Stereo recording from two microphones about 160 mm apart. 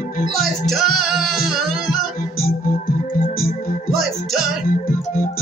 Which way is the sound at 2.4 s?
65° left (ahead or behind).